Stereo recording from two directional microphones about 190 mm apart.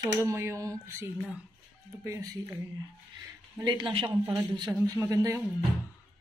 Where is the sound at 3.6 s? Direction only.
25° right (ahead or behind).